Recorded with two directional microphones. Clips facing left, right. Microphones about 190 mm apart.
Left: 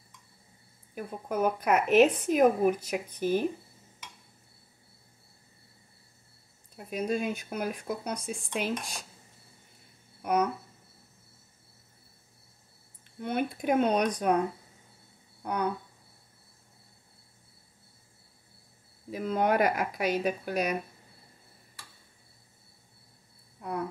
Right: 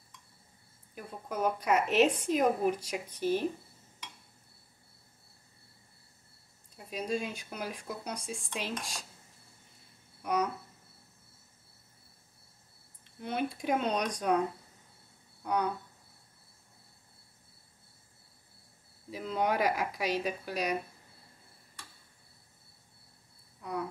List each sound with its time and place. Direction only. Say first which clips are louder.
0.9 s speech: left 5 dB; 55° left (ahead or behind)
6.9 s speech: left 4 dB; 55° left (ahead or behind)
10.2 s a sound: left 4 dB; 55° left (ahead or behind)
13.2 s speech: left 3 dB; 55° left (ahead or behind)
19.0 s speech: left 4 dB; 50° left (ahead or behind)
23.6 s a sound: left 3 dB; 55° left (ahead or behind)